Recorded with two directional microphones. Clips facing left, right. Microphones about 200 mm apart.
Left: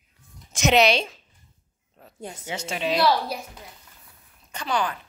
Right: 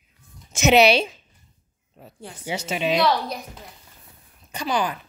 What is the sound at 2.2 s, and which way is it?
Speech, 25° left (ahead or behind).